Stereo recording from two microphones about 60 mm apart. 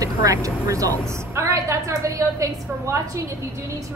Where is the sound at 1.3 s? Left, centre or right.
Right.